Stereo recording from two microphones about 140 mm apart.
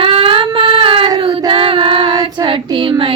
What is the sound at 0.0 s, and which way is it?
Child singing, 40° right (ahead or behind).